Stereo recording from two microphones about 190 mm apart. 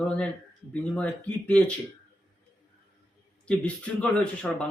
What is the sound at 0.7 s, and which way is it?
Speech, 5° left (ahead or behind).